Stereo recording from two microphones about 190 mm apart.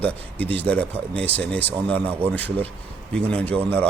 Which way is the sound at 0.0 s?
10° left (ahead or behind).